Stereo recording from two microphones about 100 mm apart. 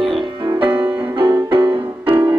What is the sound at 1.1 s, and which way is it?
Music, 55° right (ahead or behind).